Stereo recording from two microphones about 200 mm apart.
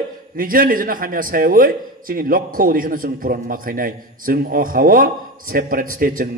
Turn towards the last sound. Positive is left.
turn(degrees=-45)  # may be behind; listen again after turning